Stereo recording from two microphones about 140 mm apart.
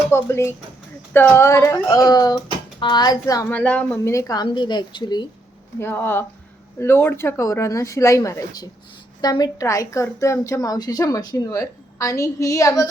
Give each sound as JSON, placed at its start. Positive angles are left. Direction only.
{"t": 0.1, "sound": "a woman's voice", "side_deg": 20}
{"t": 3.5, "sound": "a woman's voice", "side_deg": 10}
{"t": 5.8, "sound": "a woman's voice", "side_deg": 15}